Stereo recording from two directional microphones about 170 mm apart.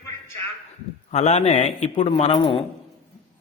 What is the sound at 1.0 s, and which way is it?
A man's voice, 40° left (ahead or behind).